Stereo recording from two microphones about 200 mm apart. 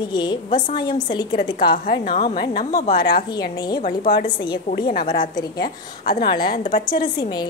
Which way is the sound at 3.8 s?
45° left (ahead or behind).